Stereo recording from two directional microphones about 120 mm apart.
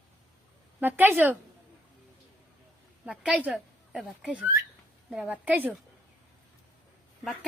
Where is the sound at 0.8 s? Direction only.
15° right (ahead or behind).